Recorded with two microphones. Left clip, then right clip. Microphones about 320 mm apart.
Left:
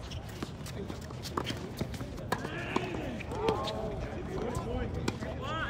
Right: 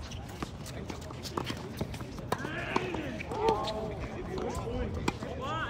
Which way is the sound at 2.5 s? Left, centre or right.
Right.